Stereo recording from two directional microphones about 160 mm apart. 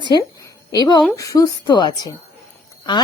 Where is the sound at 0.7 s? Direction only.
25° left (ahead or behind).